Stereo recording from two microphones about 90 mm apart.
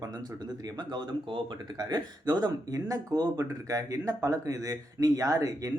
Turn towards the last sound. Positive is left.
turn(degrees=-40)  # may be behind; listen again after turning